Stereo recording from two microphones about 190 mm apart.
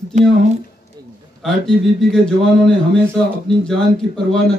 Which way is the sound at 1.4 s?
Centre (ahead or behind).